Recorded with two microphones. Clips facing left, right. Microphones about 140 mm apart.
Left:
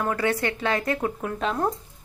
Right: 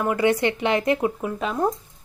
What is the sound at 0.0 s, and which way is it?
A woman's voice, 15° right (ahead or behind).